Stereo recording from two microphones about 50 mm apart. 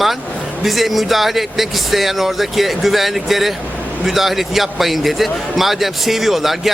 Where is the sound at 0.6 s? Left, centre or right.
Centre.